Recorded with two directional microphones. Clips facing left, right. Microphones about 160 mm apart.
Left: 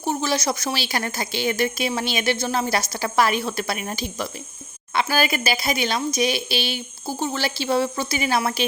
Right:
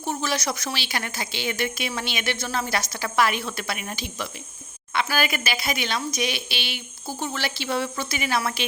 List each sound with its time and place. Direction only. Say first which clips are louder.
0.0 s a woman's voice: left 4 dB; 30° left (ahead or behind)